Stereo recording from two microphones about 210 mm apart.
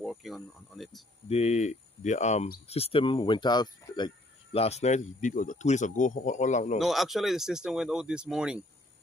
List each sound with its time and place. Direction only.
0.0 s speech: centre (ahead or behind)
1.3 s speech: 30° left (ahead or behind)
2.7 s speech: 25° left (ahead or behind)
6.8 s speech: centre (ahead or behind)